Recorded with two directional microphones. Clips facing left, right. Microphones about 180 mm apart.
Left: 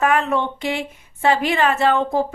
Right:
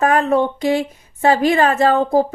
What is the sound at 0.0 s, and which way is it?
Speech, 40° right (ahead or behind).